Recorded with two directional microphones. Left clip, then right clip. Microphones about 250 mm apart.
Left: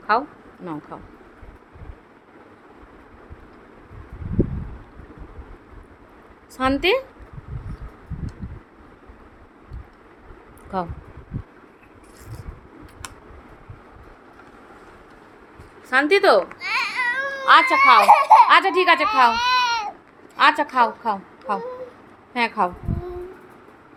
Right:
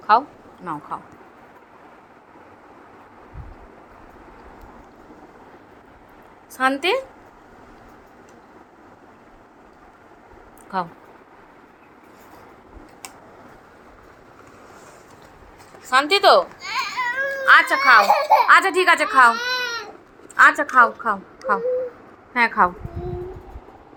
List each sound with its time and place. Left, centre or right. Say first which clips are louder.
0.1 s speech: right 4 dB; centre
6.6 s speech: even; left
10.7 s speech: right 1 dB; left
15.9 s a woman's voice: right 1 dB; left; by 22.7 s centre